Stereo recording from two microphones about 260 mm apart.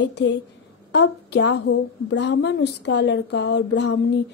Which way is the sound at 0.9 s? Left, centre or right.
Left.